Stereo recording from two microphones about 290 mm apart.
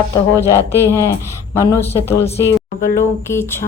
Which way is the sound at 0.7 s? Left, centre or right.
Centre.